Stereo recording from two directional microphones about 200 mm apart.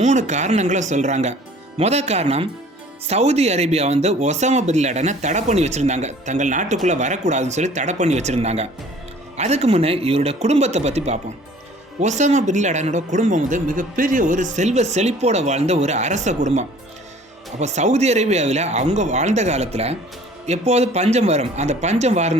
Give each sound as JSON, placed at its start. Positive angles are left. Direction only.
{"t": 0.0, "sound": "speech", "side_deg": -35}